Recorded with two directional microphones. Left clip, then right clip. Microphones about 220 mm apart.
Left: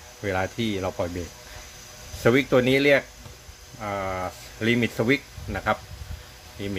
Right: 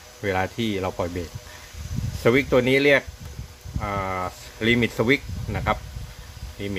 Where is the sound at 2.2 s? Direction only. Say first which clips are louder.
Right 1 dB; 5° right (ahead or behind).